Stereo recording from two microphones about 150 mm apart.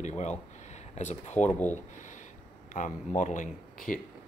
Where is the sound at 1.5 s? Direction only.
10° left (ahead or behind).